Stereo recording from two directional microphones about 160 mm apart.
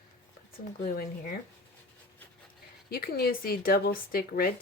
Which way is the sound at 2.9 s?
70° left (ahead or behind).